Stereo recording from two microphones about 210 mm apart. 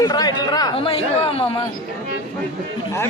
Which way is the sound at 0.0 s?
20° left (ahead or behind).